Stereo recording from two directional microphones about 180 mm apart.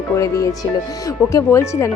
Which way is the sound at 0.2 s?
20° left (ahead or behind).